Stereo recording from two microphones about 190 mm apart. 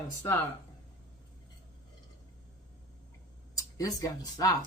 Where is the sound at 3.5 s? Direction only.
20° left (ahead or behind).